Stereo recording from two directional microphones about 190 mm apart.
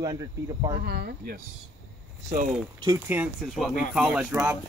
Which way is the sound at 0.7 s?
55° right (ahead or behind).